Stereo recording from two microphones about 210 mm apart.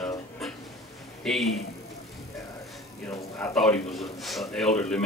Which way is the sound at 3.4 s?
5° left (ahead or behind).